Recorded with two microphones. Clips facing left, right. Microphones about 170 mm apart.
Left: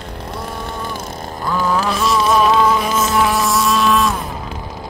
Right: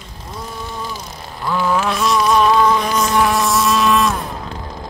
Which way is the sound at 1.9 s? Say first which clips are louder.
Left 1 dB; centre (ahead or behind).